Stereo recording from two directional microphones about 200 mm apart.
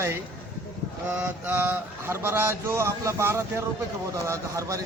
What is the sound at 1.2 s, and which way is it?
A man's voice, 10° right (ahead or behind).